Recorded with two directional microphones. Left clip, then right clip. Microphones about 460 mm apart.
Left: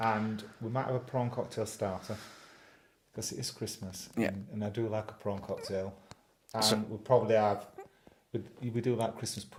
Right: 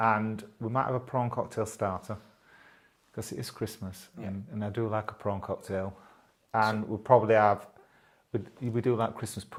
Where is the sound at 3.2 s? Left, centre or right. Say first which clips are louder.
Right 2 dB; centre.